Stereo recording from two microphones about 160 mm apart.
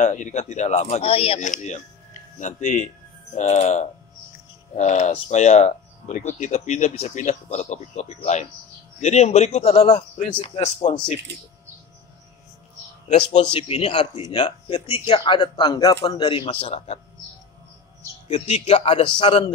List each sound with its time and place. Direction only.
0.0 s a man's voice: 45° left (ahead or behind)
13.3 s a man's voice: 35° left (ahead or behind)
18.3 s a man's voice: 40° left (ahead or behind)